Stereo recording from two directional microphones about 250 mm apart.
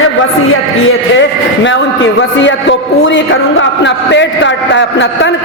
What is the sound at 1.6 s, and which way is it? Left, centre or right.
A man's voice, left.